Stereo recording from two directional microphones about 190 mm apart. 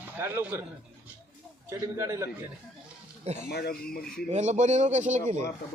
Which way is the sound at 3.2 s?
35° right (ahead or behind).